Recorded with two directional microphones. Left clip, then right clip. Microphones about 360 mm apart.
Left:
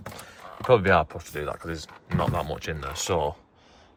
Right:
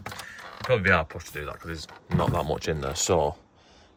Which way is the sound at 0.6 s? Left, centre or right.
Centre.